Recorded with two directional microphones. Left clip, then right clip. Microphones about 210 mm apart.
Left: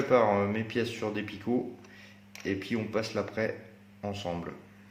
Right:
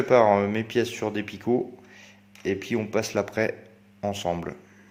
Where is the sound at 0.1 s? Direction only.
50° right (ahead or behind).